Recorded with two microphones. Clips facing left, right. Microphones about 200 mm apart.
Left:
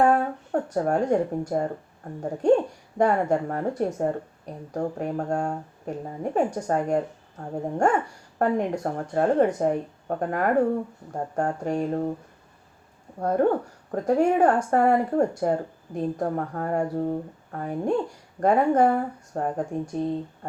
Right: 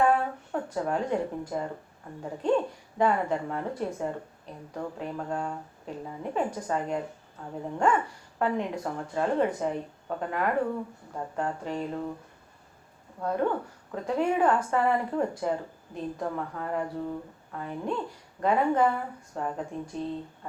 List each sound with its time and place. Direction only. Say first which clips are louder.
0.0 s speech: left 4 dB; 45° left (ahead or behind)
13.1 s speech: left 6 dB; 45° left (ahead or behind)